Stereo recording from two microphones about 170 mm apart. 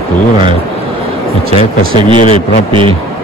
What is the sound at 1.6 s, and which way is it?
A man's voice, 30° right (ahead or behind).